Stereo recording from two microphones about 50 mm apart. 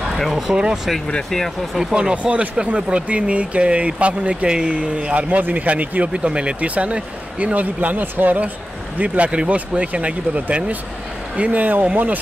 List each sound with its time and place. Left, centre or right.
0.2 s speech: centre
0.5 s speech: centre
2.0 s speech: centre
11.6 s speech: right